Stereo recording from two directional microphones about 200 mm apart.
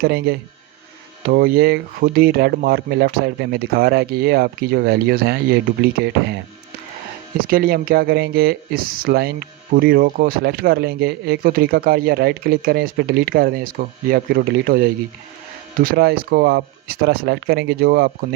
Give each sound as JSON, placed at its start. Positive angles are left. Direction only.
{"t": 0.0, "sound": "speech", "side_deg": -50}